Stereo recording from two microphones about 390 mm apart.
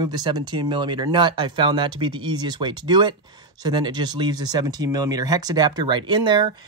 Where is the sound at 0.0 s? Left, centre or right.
Centre.